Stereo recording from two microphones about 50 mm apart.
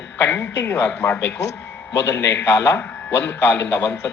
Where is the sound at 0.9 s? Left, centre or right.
Left.